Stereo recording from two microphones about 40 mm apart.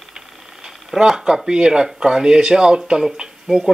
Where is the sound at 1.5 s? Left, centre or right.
Right.